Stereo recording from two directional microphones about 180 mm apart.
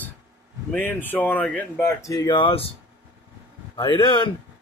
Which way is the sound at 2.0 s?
20° left (ahead or behind).